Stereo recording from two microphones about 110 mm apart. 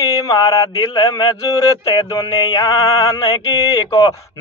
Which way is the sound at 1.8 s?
60° left (ahead or behind).